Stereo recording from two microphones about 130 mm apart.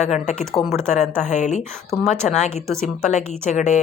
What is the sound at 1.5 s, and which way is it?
Speech, 5° left (ahead or behind).